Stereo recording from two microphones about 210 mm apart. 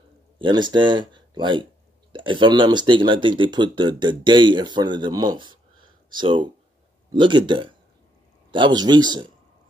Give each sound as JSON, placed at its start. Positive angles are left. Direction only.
{"t": 0.4, "sound": "speech", "side_deg": -20}